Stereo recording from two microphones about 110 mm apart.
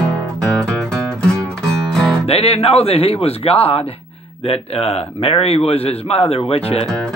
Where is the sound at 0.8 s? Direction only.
5° left (ahead or behind).